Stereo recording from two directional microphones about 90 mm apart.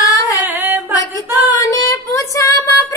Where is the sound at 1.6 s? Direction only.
35° left (ahead or behind).